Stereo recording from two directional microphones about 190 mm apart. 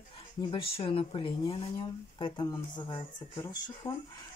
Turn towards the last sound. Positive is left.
turn(degrees=20)  # may be behind; listen again after turning